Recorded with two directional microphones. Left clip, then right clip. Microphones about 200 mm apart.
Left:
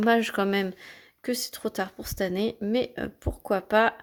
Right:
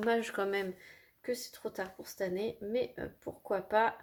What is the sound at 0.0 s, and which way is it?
Speech, 35° left (ahead or behind).